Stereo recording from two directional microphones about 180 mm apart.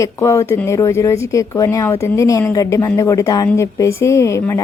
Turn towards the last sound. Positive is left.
turn(degrees=15)  # may be behind; listen again after turning